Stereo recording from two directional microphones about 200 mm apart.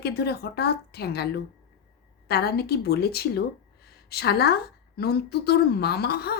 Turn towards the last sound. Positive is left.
turn(degrees=55)  # may be behind; listen again after turning